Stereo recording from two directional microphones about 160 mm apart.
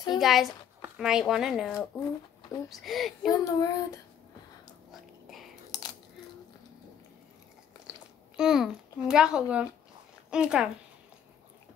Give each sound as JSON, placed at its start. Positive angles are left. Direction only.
{"t": 0.2, "sound": "a child's voice", "side_deg": 0}
{"t": 3.3, "sound": "child singing", "side_deg": 20}
{"t": 7.9, "sound": "chewing", "side_deg": -5}
{"t": 8.4, "sound": "a child's voice", "side_deg": -5}